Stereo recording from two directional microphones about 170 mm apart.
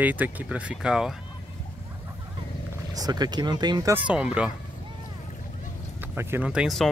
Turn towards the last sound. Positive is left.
turn(degrees=0)  # may be behind; listen again after turning